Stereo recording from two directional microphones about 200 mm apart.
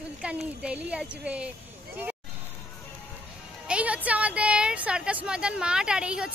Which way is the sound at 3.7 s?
5° right (ahead or behind).